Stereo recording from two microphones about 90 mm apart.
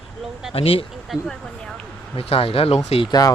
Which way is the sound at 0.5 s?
90° left.